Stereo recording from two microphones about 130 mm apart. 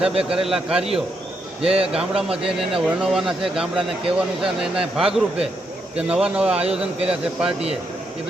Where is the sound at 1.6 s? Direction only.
45° right (ahead or behind).